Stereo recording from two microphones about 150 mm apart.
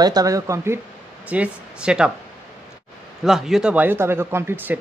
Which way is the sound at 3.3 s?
5° right (ahead or behind).